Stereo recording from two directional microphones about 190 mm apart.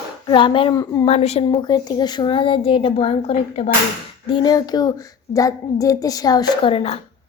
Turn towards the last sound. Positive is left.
turn(degrees=30)  # may be behind; listen again after turning